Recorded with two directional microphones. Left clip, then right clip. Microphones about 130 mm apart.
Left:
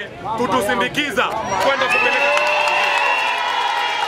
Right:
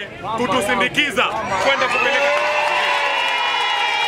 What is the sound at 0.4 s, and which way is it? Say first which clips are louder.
A man's voice: even; centre (ahead or behind).